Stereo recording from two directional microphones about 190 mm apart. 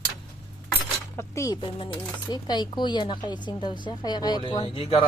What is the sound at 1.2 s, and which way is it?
Speech, 15° left (ahead or behind).